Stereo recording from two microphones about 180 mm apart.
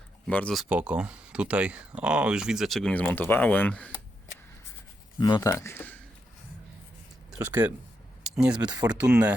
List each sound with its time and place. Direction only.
0.3 s speech: 5° left (ahead or behind)
5.1 s speech: 25° left (ahead or behind)
7.3 s speech: 10° right (ahead or behind)
8.6 s speech: 20° right (ahead or behind)
8.9 s speech: 5° right (ahead or behind)